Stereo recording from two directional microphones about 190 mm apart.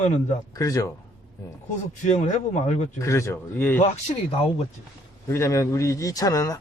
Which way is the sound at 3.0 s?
15° left (ahead or behind).